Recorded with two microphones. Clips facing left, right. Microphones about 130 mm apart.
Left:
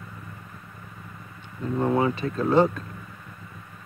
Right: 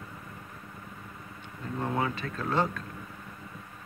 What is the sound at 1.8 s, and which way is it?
Speech, 25° left (ahead or behind).